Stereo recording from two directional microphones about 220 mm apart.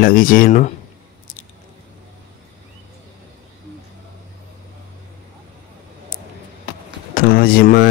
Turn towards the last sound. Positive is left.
turn(degrees=45)  # may be behind; listen again after turning